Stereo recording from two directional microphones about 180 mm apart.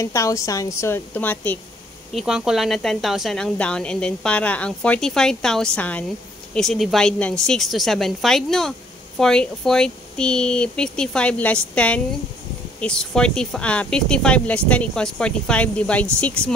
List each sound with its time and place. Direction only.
0.0 s a woman's voice: 15° left (ahead or behind)
2.1 s speech: 5° right (ahead or behind)